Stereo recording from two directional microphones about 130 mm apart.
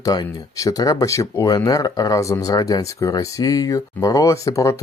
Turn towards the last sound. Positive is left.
turn(degrees=25)  # may be behind; listen again after turning